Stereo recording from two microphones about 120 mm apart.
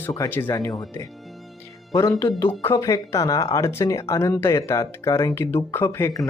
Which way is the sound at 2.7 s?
30° left (ahead or behind).